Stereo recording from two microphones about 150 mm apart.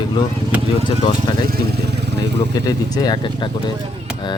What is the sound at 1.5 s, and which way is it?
Vehicle, 90° right.